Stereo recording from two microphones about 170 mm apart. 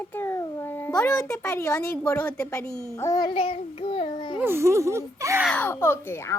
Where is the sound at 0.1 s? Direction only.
15° left (ahead or behind).